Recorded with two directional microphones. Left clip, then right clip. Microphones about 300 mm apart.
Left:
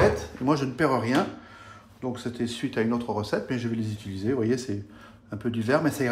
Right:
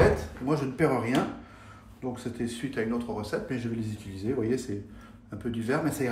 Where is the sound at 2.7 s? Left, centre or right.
Centre.